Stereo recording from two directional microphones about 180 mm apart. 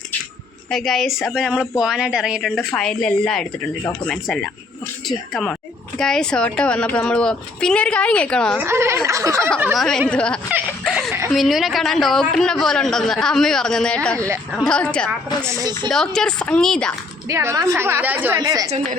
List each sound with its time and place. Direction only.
0.7 s a woman's voice: centre (ahead or behind)
8.5 s a woman's voice: 15° right (ahead or behind)
9.7 s a woman's voice: 5° left (ahead or behind)
15.4 s speech: 20° right (ahead or behind)
15.9 s a woman's voice: 5° left (ahead or behind)
17.2 s a woman's voice: 15° right (ahead or behind)